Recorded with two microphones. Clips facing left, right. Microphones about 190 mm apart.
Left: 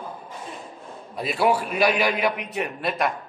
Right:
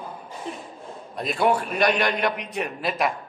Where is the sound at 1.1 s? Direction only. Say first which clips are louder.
Even; 5° left (ahead or behind).